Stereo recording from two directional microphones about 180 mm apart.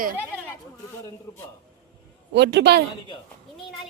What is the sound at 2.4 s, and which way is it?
Speech, 70° right (ahead or behind).